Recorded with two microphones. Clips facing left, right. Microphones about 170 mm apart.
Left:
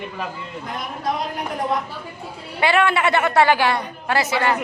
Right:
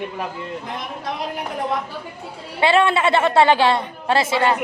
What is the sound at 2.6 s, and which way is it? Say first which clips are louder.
A woman's voice: right 2 dB; 25° right (ahead or behind).